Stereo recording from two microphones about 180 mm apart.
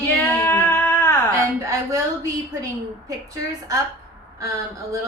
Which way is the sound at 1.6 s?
20° right (ahead or behind).